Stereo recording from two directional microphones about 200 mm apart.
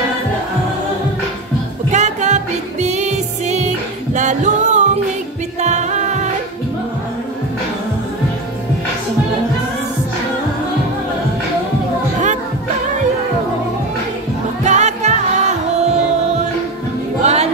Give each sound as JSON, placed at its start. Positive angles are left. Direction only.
{"t": 1.9, "sound": "music", "side_deg": -35}
{"t": 14.6, "sound": "music", "side_deg": -35}
{"t": 17.2, "sound": "music", "side_deg": -35}